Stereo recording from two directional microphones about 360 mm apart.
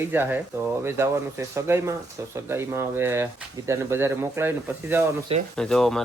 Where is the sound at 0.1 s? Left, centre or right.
Centre.